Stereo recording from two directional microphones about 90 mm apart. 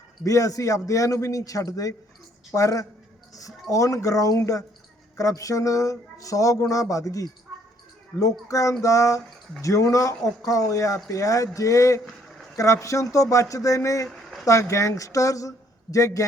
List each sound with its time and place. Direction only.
0.3 s speech: 40° left (ahead or behind)
14.1 s a sound: centre (ahead or behind)
14.4 s speech: 35° left (ahead or behind)